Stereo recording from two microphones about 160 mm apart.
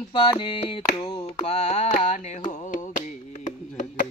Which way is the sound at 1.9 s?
45° left (ahead or behind).